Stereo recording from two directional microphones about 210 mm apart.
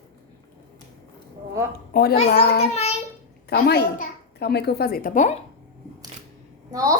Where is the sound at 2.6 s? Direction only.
30° left (ahead or behind).